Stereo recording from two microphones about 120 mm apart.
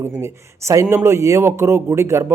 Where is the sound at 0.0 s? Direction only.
25° right (ahead or behind).